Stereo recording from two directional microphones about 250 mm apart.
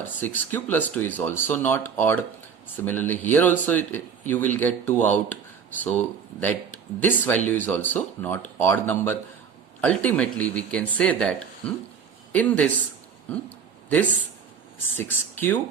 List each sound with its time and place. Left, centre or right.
0.2 s speech: centre
14.9 s speech: centre